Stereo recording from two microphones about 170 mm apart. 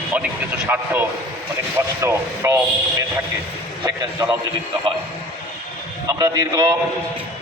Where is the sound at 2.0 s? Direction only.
15° right (ahead or behind).